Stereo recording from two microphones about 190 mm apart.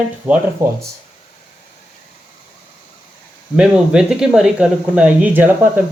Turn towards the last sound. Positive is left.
turn(degrees=-10)  # may be behind; listen again after turning